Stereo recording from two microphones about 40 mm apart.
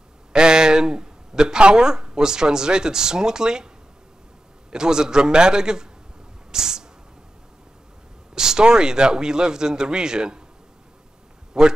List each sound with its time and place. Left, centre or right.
0.3 s a man's voice: centre
6.5 s a sound: centre
8.4 s speech: centre
11.6 s a man's voice: centre